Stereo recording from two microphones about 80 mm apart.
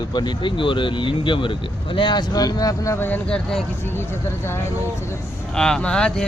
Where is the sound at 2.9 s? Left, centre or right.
Left.